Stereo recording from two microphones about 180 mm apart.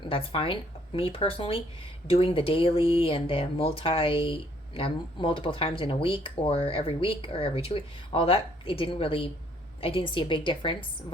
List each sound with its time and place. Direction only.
0.0 s a woman's voice: 30° left (ahead or behind)